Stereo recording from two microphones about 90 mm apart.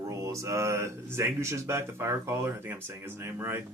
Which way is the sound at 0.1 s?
35° right (ahead or behind).